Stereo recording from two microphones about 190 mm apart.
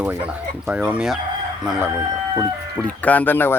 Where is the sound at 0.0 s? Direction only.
10° right (ahead or behind).